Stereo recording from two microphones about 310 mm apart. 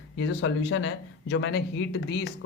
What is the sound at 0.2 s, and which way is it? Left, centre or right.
Speech, left.